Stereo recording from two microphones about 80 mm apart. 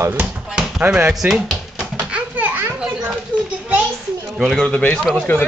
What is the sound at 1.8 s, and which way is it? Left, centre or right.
Bouncing, centre.